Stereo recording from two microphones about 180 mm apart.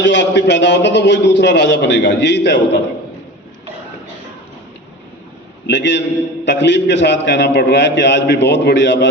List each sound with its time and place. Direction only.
0.0 s a man's voice: 80° left
5.6 s a man's voice: 75° left (ahead or behind)